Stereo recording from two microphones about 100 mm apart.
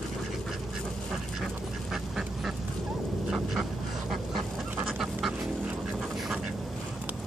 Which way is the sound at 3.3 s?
5° right (ahead or behind).